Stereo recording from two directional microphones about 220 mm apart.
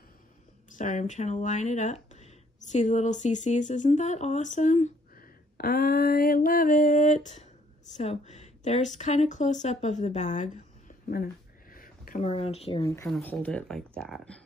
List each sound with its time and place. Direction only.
0.7 s a woman's voice: 35° left (ahead or behind)
11.7 s a sound: 40° left (ahead or behind)
12.3 s speech: 25° left (ahead or behind)
12.8 s speech: 15° left (ahead or behind)